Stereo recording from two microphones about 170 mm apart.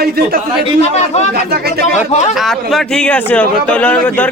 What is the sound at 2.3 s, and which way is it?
A man's voice, centre (ahead or behind).